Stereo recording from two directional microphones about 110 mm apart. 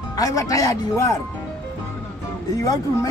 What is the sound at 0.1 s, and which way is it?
Speech, 30° left (ahead or behind).